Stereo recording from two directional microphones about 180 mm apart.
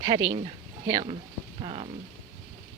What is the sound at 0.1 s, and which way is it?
Speech, 25° right (ahead or behind).